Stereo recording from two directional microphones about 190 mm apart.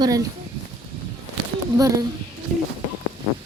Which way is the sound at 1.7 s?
15° right (ahead or behind).